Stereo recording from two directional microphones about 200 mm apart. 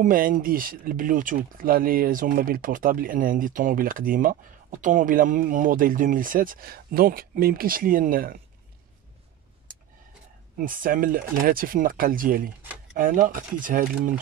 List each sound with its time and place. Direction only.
0.0 s speech: 45° right (ahead or behind)
10.6 s speech: 45° right (ahead or behind)
12.6 s a sound: 5° right (ahead or behind)
12.9 s speech: 45° right (ahead or behind)